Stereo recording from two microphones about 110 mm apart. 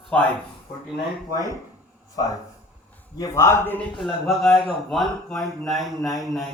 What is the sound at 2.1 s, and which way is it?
A man's voice, 35° left (ahead or behind).